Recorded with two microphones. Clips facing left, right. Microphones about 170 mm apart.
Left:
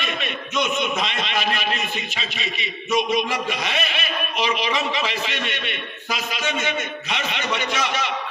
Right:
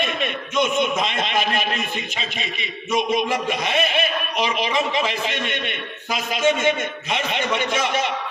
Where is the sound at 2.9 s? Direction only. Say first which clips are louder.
Right 1 dB; 50° right (ahead or behind).